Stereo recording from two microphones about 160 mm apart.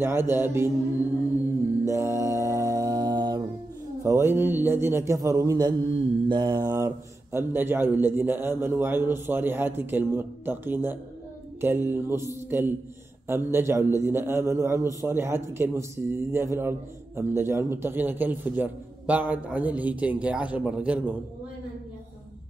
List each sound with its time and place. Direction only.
0.0 s a man's voice: 15° right (ahead or behind)
1.9 s music: 20° right (ahead or behind)
4.0 s a man's voice: 15° right (ahead or behind)
6.2 s mantra: 30° right (ahead or behind)
7.3 s a man's voice: 15° right (ahead or behind)